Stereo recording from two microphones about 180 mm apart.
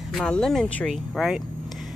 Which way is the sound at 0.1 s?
5° left (ahead or behind).